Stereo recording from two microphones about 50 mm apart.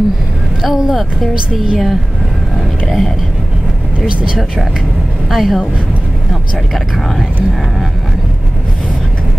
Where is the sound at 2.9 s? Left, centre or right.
Centre.